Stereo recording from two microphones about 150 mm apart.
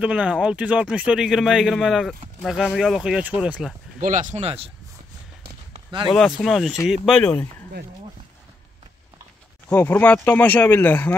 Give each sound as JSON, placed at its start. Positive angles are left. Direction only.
{"t": 0.0, "sound": "speech", "side_deg": -10}
{"t": 4.0, "sound": "speech", "side_deg": -60}
{"t": 6.1, "sound": "speech", "side_deg": 0}
{"t": 9.7, "sound": "speech", "side_deg": 10}